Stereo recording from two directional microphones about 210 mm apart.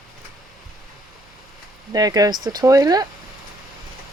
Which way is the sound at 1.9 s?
15° right (ahead or behind).